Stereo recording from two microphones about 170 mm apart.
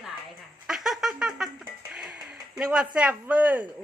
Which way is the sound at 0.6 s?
Centre (ahead or behind).